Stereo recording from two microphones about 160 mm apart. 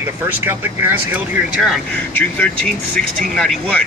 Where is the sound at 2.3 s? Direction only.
10° left (ahead or behind).